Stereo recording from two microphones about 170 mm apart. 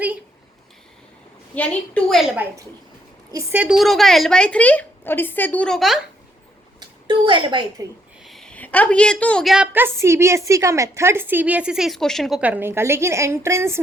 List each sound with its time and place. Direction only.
1.5 s a woman's voice: 10° left (ahead or behind)
2.3 s a woman's voice: 10° right (ahead or behind)
6.7 s a woman's voice: 30° right (ahead or behind)
8.2 s a woman's voice: centre (ahead or behind)
9.7 s a woman's voice: 15° right (ahead or behind)